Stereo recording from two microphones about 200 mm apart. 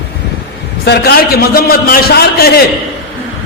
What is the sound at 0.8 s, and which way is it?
A man's voice, 55° left (ahead or behind).